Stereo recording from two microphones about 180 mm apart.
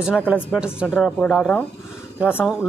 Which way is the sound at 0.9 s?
5° left (ahead or behind).